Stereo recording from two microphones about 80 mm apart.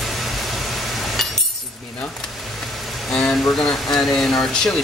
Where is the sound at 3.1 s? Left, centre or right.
Centre.